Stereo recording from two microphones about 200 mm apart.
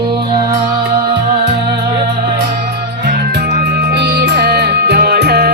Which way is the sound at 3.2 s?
55° right (ahead or behind).